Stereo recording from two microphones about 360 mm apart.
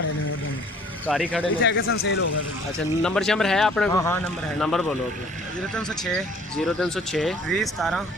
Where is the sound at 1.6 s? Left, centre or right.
Left.